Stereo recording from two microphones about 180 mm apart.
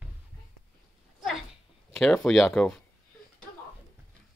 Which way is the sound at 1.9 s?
5° left (ahead or behind).